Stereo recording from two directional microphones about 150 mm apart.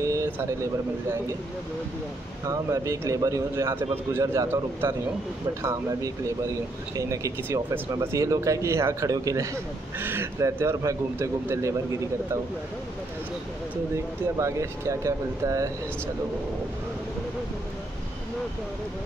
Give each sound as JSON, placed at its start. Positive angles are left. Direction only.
{"t": 0.0, "sound": "a sound", "side_deg": -20}
{"t": 2.4, "sound": "speech", "side_deg": -20}
{"t": 14.4, "sound": "speech", "side_deg": -20}